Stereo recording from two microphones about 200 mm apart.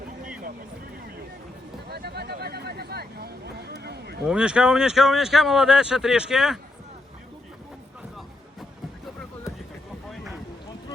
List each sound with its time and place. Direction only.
1.9 s vehicle: 55° right (ahead or behind)
4.3 s speech: 5° right (ahead or behind)